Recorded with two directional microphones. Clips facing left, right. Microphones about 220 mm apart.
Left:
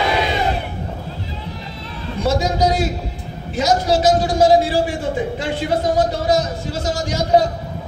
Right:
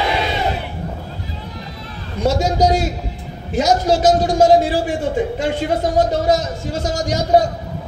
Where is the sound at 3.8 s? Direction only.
45° right (ahead or behind).